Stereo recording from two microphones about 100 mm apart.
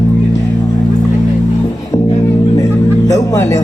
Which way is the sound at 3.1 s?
30° left (ahead or behind).